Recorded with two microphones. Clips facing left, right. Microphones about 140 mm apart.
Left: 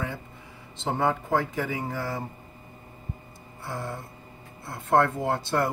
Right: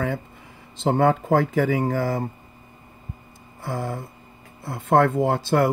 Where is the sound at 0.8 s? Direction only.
60° right (ahead or behind).